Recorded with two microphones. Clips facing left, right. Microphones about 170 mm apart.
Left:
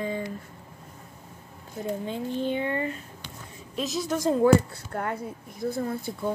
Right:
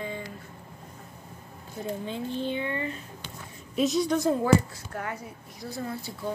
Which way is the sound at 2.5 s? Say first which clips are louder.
Left 3 dB; 40° left (ahead or behind).